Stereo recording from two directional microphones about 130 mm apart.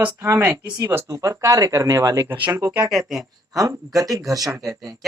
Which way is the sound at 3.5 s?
25° right (ahead or behind).